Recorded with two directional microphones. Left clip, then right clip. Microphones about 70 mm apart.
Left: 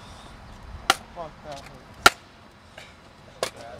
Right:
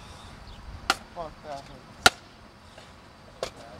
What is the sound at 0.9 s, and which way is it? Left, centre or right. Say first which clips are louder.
Chop: left 4 dB; left.